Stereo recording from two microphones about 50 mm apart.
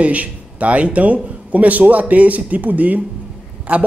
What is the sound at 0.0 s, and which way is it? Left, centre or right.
A man's voice, right.